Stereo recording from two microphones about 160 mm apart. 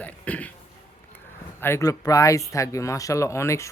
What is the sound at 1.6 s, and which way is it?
Speech, 20° left (ahead or behind).